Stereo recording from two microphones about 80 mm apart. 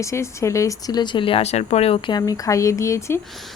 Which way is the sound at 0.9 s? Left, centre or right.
Left.